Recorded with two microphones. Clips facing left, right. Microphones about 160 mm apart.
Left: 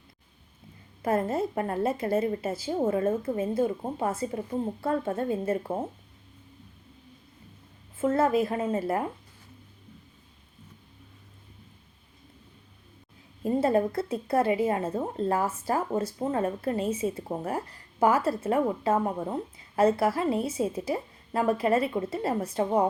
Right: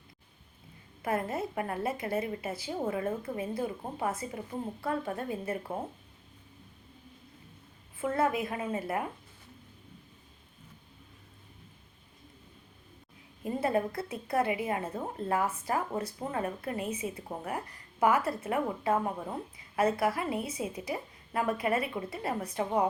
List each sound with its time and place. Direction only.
1.0 s a woman's voice: 25° left (ahead or behind)
7.9 s a woman's voice: 25° left (ahead or behind)
13.4 s a woman's voice: 30° left (ahead or behind)